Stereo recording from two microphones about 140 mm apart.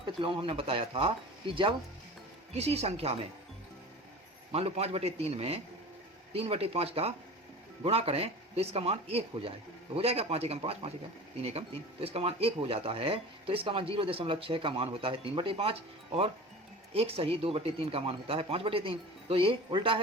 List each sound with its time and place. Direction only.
0.0 s speech: 40° right (ahead or behind)
2.5 s speech: 50° right (ahead or behind)
4.5 s speech: 45° right (ahead or behind)
16.9 s speech: 45° right (ahead or behind)